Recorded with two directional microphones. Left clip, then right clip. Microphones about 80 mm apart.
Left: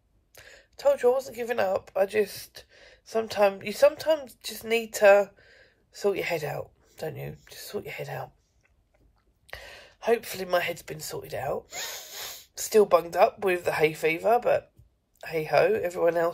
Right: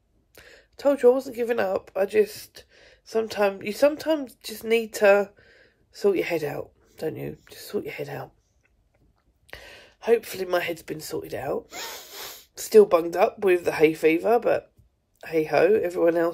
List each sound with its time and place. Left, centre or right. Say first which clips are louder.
0.3 s speech: right 1 dB; right
9.5 s speech: even; right